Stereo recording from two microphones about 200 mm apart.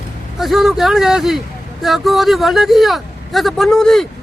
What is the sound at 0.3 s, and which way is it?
Speech, centre (ahead or behind).